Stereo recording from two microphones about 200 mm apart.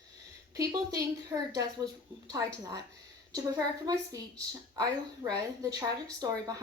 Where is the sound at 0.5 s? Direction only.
15° right (ahead or behind).